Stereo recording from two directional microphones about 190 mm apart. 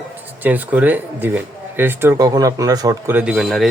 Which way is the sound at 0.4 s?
10° right (ahead or behind).